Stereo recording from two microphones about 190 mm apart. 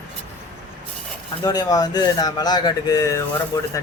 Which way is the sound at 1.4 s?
20° left (ahead or behind).